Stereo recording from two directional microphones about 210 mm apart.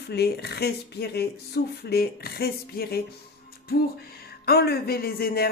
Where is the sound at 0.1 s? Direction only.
50° left (ahead or behind).